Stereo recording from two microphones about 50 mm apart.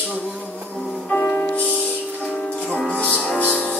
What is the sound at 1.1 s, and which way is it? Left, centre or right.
Music, left.